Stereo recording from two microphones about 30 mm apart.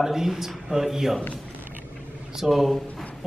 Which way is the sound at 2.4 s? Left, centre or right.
Centre.